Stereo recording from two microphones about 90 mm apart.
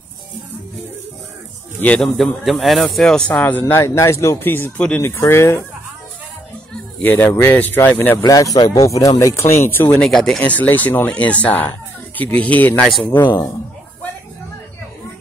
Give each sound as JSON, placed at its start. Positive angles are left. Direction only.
{"t": 2.0, "sound": "speech", "side_deg": 0}
{"t": 3.8, "sound": "speech", "side_deg": 35}
{"t": 7.0, "sound": "speech", "side_deg": 20}
{"t": 8.2, "sound": "speech", "side_deg": 40}
{"t": 9.3, "sound": "speech", "side_deg": 30}
{"t": 9.9, "sound": "speech", "side_deg": 5}
{"t": 10.4, "sound": "speech", "side_deg": 15}